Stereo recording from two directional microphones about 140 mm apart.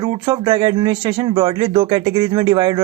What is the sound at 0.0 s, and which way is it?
Speech, 30° right (ahead or behind).